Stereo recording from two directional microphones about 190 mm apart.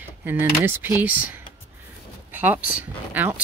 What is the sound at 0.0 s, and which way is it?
Speech, 10° right (ahead or behind).